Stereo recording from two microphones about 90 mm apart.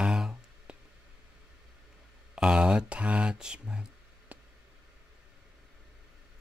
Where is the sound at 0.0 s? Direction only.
10° right (ahead or behind).